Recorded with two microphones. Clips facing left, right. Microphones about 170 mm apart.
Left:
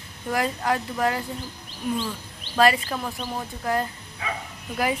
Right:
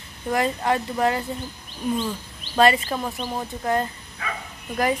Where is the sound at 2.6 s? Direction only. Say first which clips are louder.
Right 2 dB; centre (ahead or behind).